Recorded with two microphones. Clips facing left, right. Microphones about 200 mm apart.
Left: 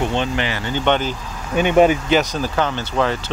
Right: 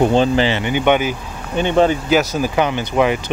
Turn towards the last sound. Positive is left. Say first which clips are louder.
# right 4 dB
turn(degrees=-15)  # may be behind; listen again after turning